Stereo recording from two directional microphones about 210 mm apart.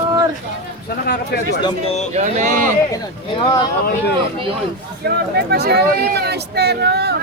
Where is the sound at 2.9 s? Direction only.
20° left (ahead or behind).